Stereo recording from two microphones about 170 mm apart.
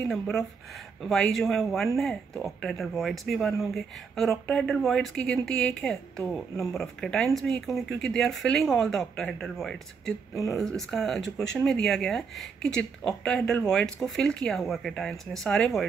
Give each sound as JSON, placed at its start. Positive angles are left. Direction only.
{"t": 0.0, "sound": "speech", "side_deg": 0}